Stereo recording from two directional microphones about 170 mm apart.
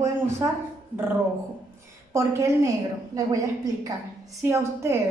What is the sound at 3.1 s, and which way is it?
A woman's voice, 20° right (ahead or behind).